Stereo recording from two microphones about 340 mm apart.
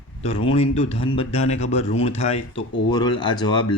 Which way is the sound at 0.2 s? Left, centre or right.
Centre.